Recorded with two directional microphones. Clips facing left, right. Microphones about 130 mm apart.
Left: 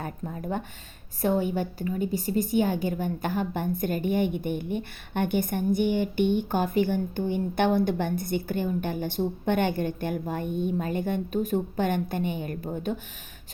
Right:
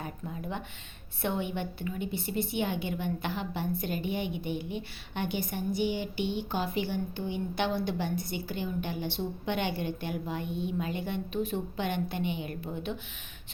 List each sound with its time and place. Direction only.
0.0 s a woman's voice: 45° left (ahead or behind)